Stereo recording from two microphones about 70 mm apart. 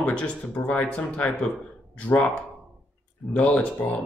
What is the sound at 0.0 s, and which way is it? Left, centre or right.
Speech, left.